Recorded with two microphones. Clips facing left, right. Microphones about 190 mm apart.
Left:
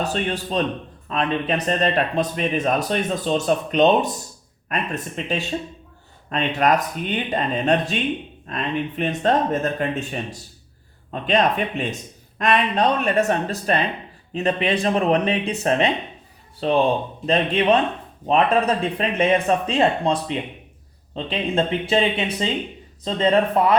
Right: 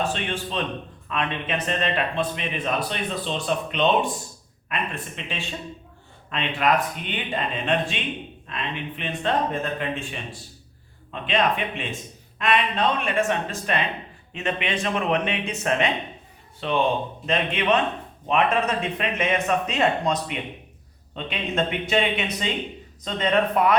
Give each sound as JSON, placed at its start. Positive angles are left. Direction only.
{"t": 0.0, "sound": "speech", "side_deg": 40}